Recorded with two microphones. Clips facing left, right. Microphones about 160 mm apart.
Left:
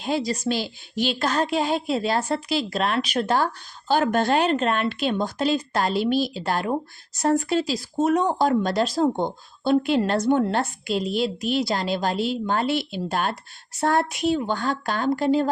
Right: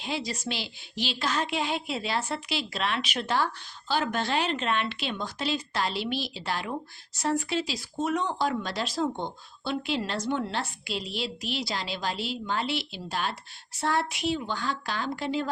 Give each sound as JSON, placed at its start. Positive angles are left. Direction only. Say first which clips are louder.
{"t": 0.0, "sound": "speech", "louder": "left 8 dB", "side_deg": 40}